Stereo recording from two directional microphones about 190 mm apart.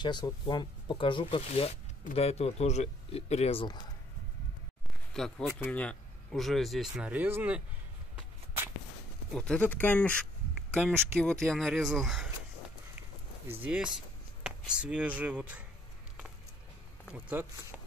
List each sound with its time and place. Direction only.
0.0 s speech: 25° left (ahead or behind)
5.1 s speech: centre (ahead or behind)
9.3 s speech: 5° left (ahead or behind)
13.5 s speech: 10° right (ahead or behind)
17.1 s speech: 10° right (ahead or behind)